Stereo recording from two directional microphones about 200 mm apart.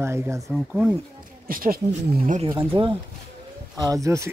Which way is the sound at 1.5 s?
45° right (ahead or behind).